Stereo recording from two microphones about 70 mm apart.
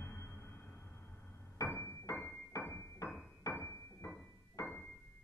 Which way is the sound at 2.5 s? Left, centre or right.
Left.